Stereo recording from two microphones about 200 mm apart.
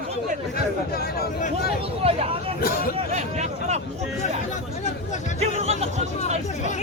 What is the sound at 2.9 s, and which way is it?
Speech, 35° right (ahead or behind).